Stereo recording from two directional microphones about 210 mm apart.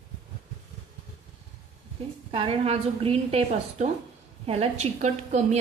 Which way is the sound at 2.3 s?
30° right (ahead or behind).